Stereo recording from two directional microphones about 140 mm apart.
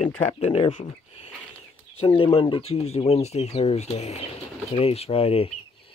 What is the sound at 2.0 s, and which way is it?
Speech, 35° left (ahead or behind).